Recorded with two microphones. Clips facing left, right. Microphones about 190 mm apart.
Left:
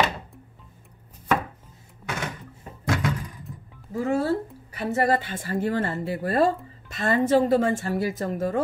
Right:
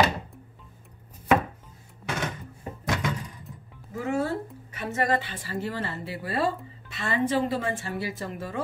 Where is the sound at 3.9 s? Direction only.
35° left (ahead or behind).